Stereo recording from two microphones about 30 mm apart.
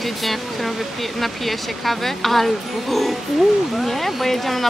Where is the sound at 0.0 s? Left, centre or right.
Centre.